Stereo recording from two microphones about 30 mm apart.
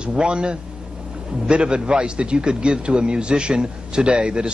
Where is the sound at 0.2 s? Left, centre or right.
Right.